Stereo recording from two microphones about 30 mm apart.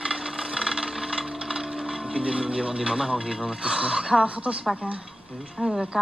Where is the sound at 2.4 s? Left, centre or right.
Right.